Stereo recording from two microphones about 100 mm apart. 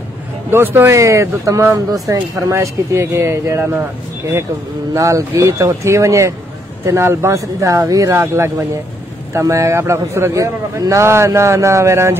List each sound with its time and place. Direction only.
0.5 s a man's voice: 25° right (ahead or behind)
4.9 s a man's voice: 30° right (ahead or behind)